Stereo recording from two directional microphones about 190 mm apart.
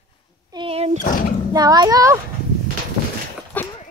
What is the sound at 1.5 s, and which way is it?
Speech, 20° right (ahead or behind).